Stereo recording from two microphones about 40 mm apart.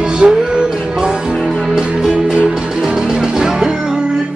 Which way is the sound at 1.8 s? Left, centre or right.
Centre.